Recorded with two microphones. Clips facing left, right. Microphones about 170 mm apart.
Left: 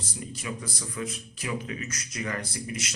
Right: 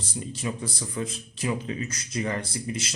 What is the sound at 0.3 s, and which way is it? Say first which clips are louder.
A man's voice: right 4 dB; 30° right (ahead or behind).